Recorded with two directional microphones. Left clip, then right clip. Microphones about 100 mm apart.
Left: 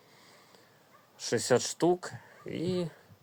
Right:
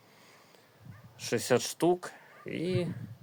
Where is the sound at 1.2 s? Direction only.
20° right (ahead or behind).